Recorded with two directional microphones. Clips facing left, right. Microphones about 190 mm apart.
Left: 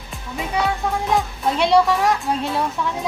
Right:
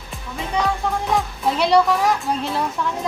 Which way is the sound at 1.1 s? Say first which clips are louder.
Left 1 dB; centre (ahead or behind).